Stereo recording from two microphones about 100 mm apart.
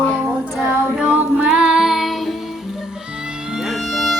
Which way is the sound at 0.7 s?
10° right (ahead or behind).